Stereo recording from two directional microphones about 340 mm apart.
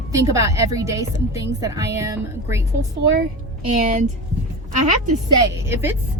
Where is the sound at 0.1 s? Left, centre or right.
Centre.